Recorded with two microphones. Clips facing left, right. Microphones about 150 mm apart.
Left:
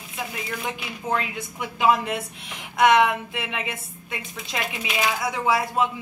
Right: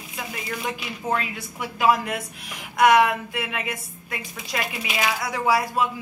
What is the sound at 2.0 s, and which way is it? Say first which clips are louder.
Speech: left 1 dB; 25° left (ahead or behind).